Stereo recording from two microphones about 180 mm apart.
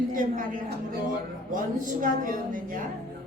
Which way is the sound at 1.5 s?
45° right (ahead or behind).